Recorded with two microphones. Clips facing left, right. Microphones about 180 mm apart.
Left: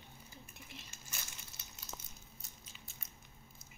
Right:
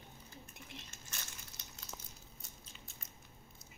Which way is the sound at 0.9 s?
10° left (ahead or behind).